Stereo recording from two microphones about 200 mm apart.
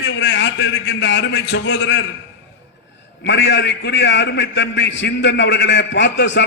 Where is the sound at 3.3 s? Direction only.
60° left (ahead or behind).